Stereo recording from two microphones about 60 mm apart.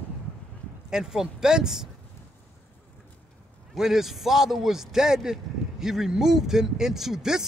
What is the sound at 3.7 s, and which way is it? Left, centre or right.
A man's voice, centre.